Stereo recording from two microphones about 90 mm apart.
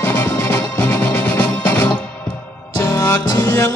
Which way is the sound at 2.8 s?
25° left (ahead or behind).